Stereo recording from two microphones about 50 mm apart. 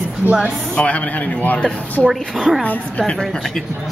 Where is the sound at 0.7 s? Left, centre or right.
Left.